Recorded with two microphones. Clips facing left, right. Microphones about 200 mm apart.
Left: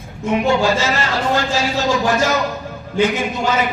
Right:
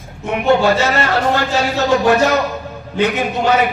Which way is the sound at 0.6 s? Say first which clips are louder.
Right 3 dB; 60° right (ahead or behind).